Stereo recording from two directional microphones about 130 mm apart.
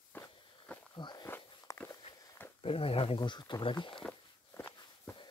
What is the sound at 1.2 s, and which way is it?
Walk, 20° left (ahead or behind).